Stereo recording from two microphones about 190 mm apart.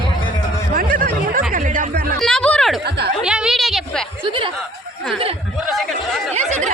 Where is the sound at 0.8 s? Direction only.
45° right (ahead or behind).